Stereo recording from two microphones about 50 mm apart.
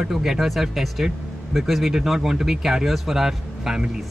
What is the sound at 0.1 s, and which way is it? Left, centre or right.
Speech, centre.